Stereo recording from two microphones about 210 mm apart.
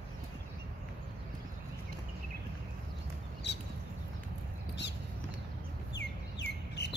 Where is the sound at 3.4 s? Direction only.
55° left (ahead or behind).